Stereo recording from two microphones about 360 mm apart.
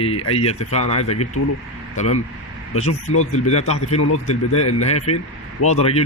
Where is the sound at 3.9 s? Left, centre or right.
Left.